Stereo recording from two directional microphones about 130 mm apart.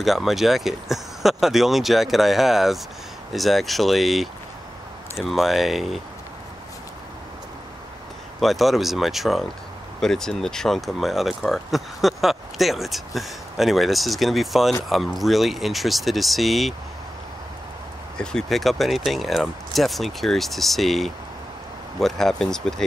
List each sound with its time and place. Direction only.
0.0 s speech: centre (ahead or behind)
8.4 s speech: centre (ahead or behind)
18.1 s speech: 5° left (ahead or behind)